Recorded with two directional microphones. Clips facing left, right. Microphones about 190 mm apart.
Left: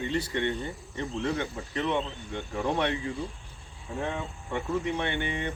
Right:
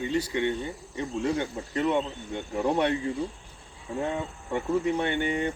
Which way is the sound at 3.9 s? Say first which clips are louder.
Right 3 dB; 10° right (ahead or behind).